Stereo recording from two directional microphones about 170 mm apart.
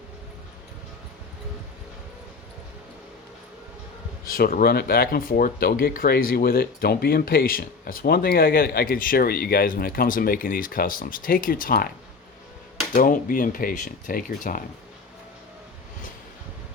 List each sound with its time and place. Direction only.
4.3 s speech: 60° left (ahead or behind)
12.9 s speech: 55° left (ahead or behind)